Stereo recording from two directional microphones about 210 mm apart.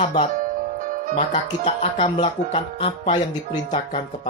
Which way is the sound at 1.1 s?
30° left (ahead or behind).